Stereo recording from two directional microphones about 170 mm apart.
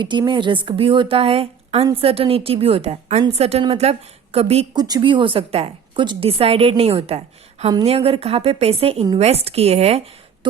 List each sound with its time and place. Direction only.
0.0 s a woman's voice: 25° right (ahead or behind)
4.8 s a woman's voice: 25° right (ahead or behind); by 10.0 s 40° right (ahead or behind)
10.4 s a woman's voice: 30° right (ahead or behind)